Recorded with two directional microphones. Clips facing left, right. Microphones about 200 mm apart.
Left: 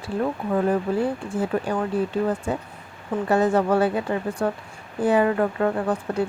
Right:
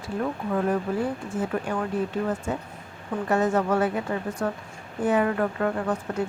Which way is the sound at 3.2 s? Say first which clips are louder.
Left 3 dB; 35° left (ahead or behind).